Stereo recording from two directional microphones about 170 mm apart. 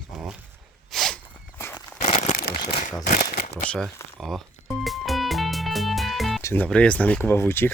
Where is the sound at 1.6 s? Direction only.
15° left (ahead or behind).